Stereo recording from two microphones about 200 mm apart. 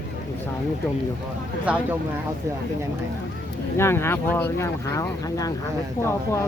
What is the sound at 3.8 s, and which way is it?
Speech, 15° left (ahead or behind).